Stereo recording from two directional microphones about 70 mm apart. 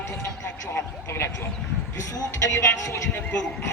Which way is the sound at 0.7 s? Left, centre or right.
Left.